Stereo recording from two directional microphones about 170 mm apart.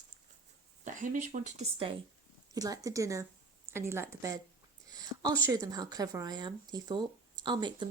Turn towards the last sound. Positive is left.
turn(degrees=-25)  # may be behind; listen again after turning